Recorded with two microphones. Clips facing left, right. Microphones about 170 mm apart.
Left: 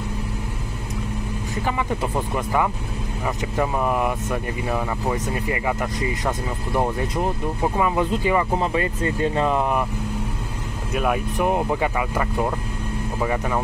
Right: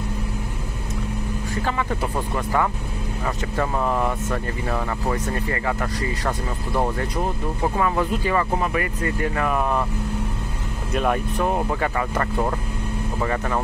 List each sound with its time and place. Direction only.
1.5 s speech: 15° left (ahead or behind)
10.9 s speech: 5° left (ahead or behind)
11.3 s speech: 15° left (ahead or behind)